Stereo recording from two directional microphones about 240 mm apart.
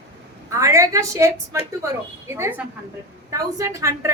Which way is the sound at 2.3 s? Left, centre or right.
Centre.